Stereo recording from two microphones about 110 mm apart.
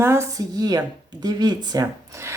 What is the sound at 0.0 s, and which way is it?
Speech, 25° right (ahead or behind).